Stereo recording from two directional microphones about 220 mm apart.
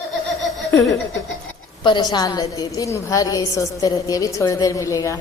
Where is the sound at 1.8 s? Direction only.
20° left (ahead or behind).